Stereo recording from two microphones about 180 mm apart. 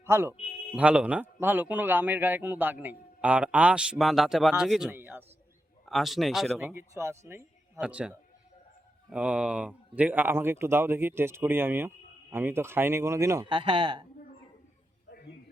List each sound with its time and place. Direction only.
0.0 s a man's voice: 15° right (ahead or behind)
5.8 s speech: centre (ahead or behind)
6.7 s a man's voice: 15° right (ahead or behind)